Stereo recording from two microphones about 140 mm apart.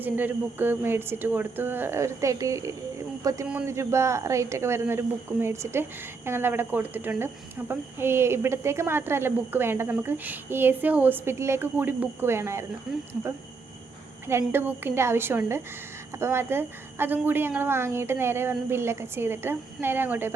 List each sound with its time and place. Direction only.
0.0 s speech: 15° right (ahead or behind)
14.3 s speech: 15° right (ahead or behind)